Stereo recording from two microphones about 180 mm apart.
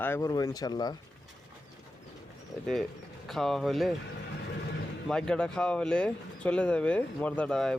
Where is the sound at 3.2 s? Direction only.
Centre (ahead or behind).